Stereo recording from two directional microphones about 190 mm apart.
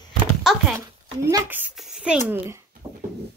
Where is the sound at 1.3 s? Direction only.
15° right (ahead or behind).